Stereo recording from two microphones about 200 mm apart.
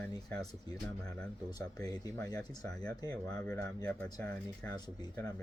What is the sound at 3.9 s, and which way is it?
Speech, 5° left (ahead or behind).